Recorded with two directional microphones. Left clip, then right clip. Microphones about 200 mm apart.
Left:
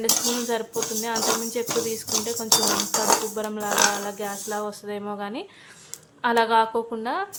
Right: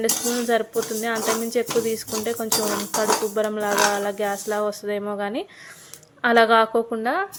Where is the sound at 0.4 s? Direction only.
15° right (ahead or behind).